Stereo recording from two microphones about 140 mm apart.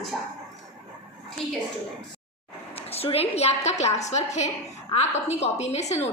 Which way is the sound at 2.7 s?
45° left (ahead or behind).